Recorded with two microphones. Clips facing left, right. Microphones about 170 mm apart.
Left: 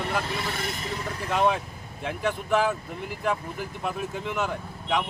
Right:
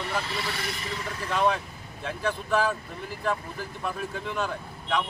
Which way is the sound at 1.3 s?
20° left (ahead or behind).